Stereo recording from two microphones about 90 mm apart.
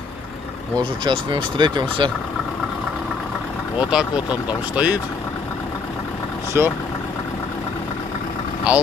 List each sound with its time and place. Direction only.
0.7 s speech: 65° right (ahead or behind)
3.9 s speech: 15° right (ahead or behind)
6.5 s speech: 25° right (ahead or behind)
8.7 s speech: 15° right (ahead or behind)